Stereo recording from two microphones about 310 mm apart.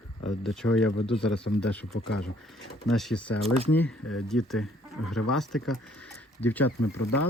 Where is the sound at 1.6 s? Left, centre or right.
Centre.